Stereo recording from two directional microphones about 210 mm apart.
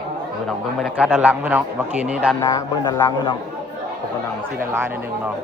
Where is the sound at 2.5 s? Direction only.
20° left (ahead or behind).